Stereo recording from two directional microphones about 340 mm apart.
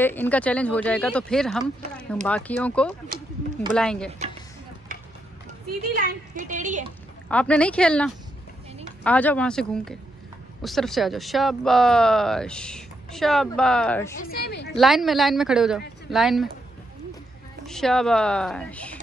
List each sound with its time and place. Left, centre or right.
0.0 s speech: centre
5.9 s a woman's voice: right
7.2 s speech: centre
14.2 s a woman's voice: left
14.8 s speech: centre
17.6 s speech: centre